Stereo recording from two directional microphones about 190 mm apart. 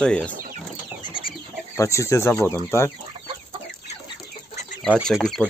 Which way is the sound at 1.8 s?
15° left (ahead or behind).